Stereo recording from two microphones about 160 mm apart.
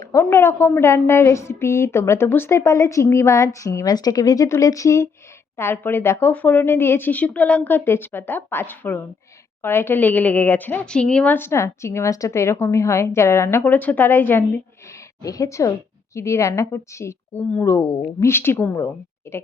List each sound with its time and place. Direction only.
0.0 s a woman's voice: 15° left (ahead or behind)